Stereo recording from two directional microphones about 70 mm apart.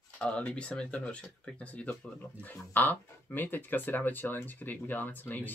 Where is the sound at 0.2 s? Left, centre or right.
Centre.